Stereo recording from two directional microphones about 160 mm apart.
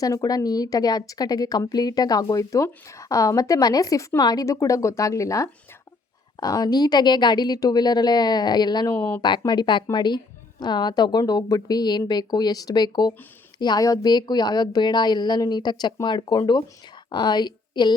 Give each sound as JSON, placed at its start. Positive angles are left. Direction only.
{"t": 0.0, "sound": "a woman's voice", "side_deg": 20}
{"t": 9.0, "sound": "speech", "side_deg": 10}
{"t": 9.5, "sound": "a woman's voice", "side_deg": 30}